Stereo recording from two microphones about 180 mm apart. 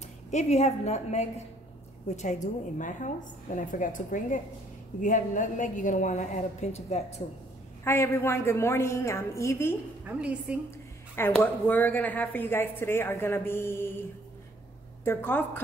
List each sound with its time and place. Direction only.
0.3 s a woman's voice: 40° left (ahead or behind)
7.8 s speech: 15° left (ahead or behind)
10.0 s a woman's voice: 5° right (ahead or behind)
11.1 s speech: 10° left (ahead or behind)
15.0 s speech: 10° left (ahead or behind)